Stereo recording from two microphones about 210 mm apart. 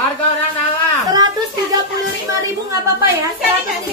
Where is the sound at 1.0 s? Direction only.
20° right (ahead or behind).